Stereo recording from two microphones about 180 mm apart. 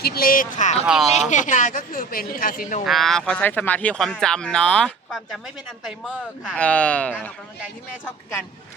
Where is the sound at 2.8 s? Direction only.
Centre (ahead or behind).